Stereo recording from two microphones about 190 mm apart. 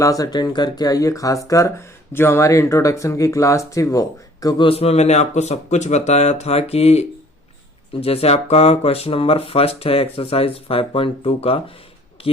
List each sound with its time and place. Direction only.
0.0 s speech: 20° left (ahead or behind)
8.0 s speech: 30° left (ahead or behind)